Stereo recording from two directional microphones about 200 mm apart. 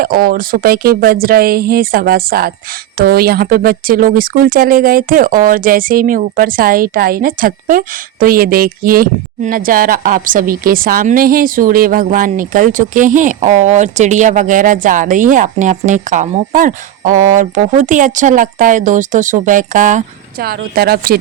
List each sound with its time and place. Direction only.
0.0 s speech: 45° right (ahead or behind)